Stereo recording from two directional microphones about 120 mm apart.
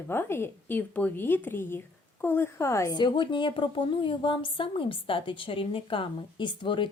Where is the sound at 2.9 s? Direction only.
40° left (ahead or behind).